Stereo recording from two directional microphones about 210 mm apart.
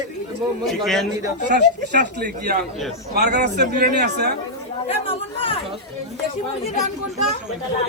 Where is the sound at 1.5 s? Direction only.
55° right (ahead or behind).